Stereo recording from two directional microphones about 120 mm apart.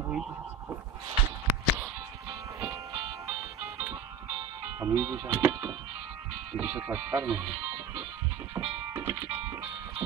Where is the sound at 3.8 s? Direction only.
10° right (ahead or behind).